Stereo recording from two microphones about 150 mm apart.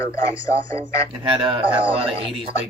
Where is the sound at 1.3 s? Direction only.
35° right (ahead or behind).